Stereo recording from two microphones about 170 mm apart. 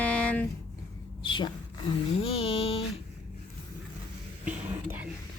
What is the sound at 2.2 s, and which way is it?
Music, 35° left (ahead or behind).